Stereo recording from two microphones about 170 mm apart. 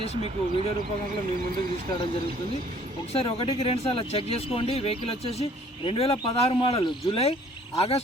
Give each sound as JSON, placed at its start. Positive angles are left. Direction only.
{"t": 0.2, "sound": "speech", "side_deg": -35}
{"t": 3.1, "sound": "speech", "side_deg": 35}